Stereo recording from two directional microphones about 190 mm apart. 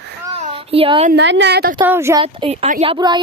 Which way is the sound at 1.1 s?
70° right (ahead or behind).